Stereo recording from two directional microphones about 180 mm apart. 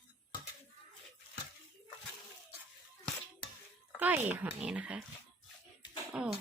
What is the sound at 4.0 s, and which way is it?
Speech, 10° right (ahead or behind).